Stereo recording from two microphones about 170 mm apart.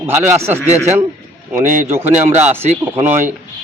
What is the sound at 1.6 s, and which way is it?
Speech, 45° right (ahead or behind).